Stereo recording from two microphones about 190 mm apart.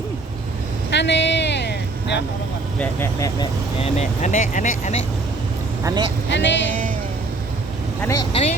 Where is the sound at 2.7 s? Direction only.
10° left (ahead or behind).